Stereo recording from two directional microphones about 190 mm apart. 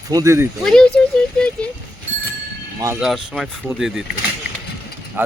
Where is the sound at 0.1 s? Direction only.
15° right (ahead or behind).